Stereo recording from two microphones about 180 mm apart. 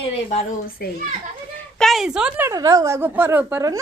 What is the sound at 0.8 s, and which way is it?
Speech, 60° left (ahead or behind).